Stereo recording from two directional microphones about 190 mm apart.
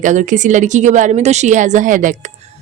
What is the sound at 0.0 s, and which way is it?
A woman's voice, 40° right (ahead or behind).